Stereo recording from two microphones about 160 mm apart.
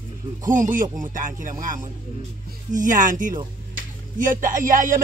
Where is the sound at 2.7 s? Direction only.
55° right (ahead or behind).